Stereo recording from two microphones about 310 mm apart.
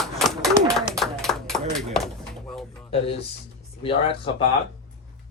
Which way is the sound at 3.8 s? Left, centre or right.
Centre.